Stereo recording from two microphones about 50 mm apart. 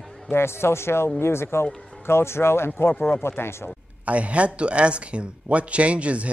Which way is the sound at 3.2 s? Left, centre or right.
Left.